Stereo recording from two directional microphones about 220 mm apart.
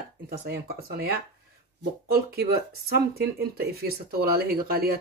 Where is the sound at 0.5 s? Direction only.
45° right (ahead or behind).